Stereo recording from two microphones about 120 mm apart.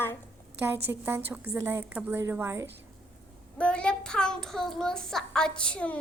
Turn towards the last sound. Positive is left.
turn(degrees=10)  # may be behind; listen again after turning